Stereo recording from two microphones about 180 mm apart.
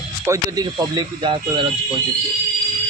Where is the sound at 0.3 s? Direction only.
20° right (ahead or behind).